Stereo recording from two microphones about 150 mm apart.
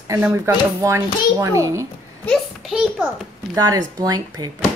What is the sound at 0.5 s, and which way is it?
A child's voice, 20° right (ahead or behind).